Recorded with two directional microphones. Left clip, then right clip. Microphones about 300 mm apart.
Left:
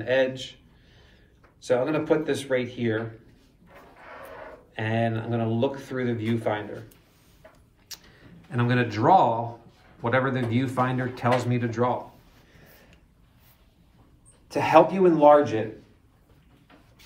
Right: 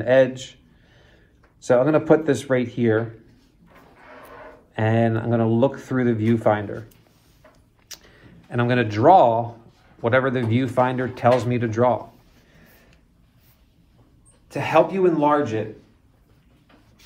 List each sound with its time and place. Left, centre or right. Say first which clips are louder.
0.0 s speech: right 7 dB; centre
1.6 s speech: right 6 dB; centre
4.7 s speech: right 6 dB; centre
7.9 s speech: right 2 dB; centre
14.5 s speech: even; centre